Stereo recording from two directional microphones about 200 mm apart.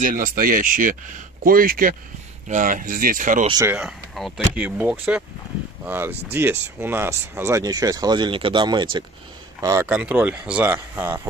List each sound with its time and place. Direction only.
0.0 s speech: 40° right (ahead or behind)
3.4 s speech: 20° right (ahead or behind)
3.7 s speech: centre (ahead or behind)